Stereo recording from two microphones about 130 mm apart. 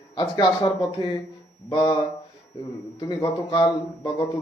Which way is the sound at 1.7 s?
35° left (ahead or behind).